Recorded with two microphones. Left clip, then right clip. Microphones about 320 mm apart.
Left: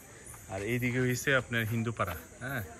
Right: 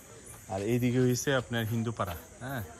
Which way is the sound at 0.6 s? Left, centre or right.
Centre.